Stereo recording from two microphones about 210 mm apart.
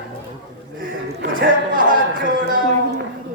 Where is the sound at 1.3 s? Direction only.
40° right (ahead or behind).